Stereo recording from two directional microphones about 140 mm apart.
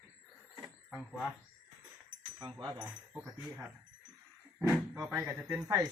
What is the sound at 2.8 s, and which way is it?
Speech, 15° right (ahead or behind).